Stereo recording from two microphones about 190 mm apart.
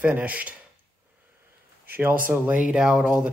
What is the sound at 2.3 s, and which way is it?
Speech, 5° right (ahead or behind).